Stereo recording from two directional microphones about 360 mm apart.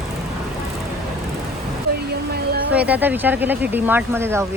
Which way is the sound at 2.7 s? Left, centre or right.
Centre.